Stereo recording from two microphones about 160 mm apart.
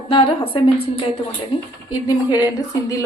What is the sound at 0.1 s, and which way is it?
Speech, 35° left (ahead or behind).